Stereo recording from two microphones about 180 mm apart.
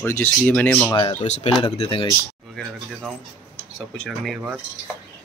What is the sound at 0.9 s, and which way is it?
Speech, 25° left (ahead or behind).